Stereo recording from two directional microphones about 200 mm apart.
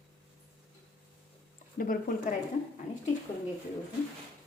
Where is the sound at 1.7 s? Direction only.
45° left (ahead or behind).